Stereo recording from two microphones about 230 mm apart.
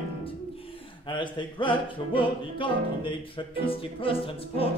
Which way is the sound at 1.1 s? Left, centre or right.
Left.